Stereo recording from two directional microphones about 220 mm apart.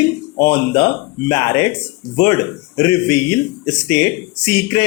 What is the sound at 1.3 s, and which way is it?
Speech, 15° left (ahead or behind).